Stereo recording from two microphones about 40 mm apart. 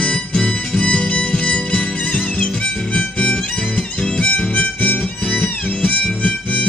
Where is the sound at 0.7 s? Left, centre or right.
Left.